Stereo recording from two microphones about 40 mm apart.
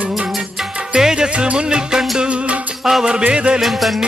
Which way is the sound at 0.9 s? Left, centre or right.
Centre.